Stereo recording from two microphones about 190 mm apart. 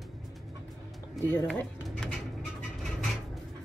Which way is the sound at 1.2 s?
10° left (ahead or behind).